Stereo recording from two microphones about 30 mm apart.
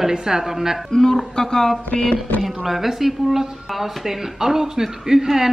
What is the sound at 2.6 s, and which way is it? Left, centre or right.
Speech, centre.